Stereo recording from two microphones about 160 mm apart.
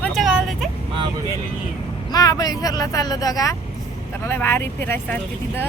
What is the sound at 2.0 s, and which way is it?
Speech, 25° left (ahead or behind).